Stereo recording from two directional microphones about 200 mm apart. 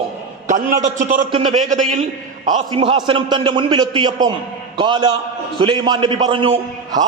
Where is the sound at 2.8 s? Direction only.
25° right (ahead or behind).